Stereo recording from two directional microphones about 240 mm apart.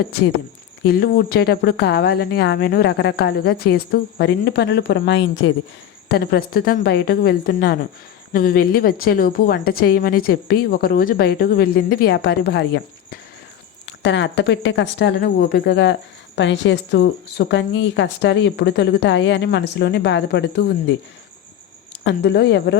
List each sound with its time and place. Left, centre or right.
0.9 s a woman's voice: left
22.0 s speech: left